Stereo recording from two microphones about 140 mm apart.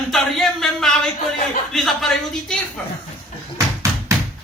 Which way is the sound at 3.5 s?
20° right (ahead or behind).